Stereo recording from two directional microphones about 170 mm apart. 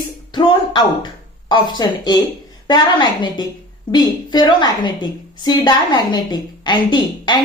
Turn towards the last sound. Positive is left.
turn(degrees=25)  # may be behind; listen again after turning